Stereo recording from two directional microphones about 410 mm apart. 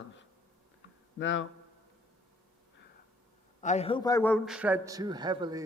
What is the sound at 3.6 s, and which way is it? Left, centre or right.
A man's voice, centre.